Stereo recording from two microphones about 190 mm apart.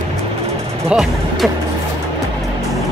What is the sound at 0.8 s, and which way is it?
Speech, centre (ahead or behind).